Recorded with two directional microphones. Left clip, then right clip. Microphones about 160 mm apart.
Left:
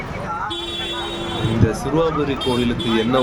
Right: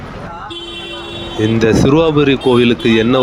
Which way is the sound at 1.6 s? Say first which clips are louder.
Right 9 dB; 50° right (ahead or behind).